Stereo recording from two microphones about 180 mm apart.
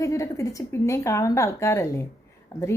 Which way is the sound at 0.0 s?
15° left (ahead or behind).